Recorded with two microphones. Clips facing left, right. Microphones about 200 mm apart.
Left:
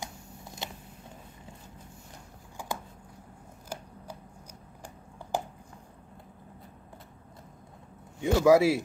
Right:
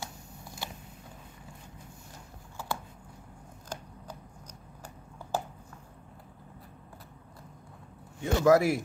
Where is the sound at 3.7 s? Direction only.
10° left (ahead or behind).